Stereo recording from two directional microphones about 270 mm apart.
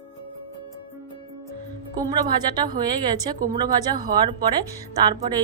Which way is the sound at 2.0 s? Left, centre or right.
Centre.